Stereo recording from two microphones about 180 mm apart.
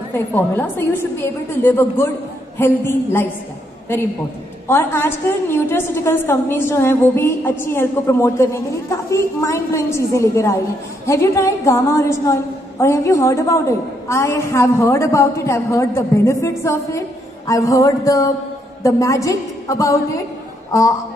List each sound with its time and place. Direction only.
0.1 s a woman's voice: 10° left (ahead or behind)
4.6 s a woman's voice: 10° left (ahead or behind)
17.5 s a sound: 20° left (ahead or behind)
18.8 s a woman's voice: 20° left (ahead or behind)